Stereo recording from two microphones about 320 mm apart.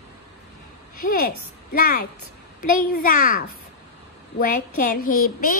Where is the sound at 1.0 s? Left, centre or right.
Left.